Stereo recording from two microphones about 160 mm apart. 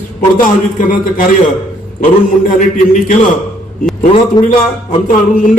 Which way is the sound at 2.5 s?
50° left (ahead or behind).